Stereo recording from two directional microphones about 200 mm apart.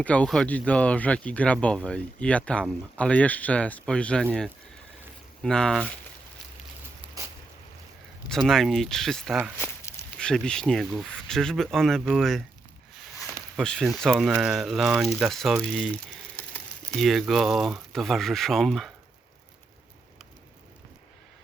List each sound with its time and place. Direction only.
0.0 s speech: 5° left (ahead or behind)
5.4 s speech: 5° left (ahead or behind)
8.3 s speech: centre (ahead or behind)
13.6 s speech: 5° left (ahead or behind)